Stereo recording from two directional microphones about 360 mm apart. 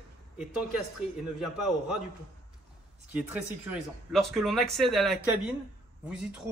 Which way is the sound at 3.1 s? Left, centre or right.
Centre.